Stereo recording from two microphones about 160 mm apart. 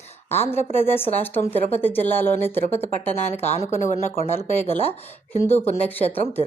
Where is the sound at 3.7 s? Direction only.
50° left (ahead or behind).